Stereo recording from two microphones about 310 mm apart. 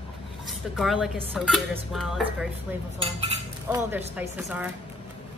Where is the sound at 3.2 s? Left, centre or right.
Centre.